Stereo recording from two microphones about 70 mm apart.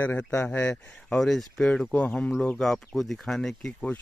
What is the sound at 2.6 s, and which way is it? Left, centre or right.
Speech, centre.